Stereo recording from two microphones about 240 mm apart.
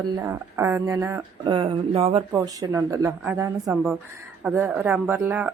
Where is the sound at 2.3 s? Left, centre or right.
Centre.